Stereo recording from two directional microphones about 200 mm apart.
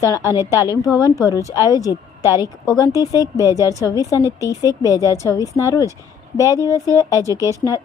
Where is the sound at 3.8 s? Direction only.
15° left (ahead or behind).